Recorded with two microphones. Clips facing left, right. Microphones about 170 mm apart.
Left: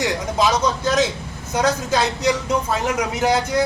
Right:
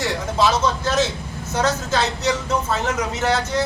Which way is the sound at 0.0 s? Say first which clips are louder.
Even; 15° left (ahead or behind).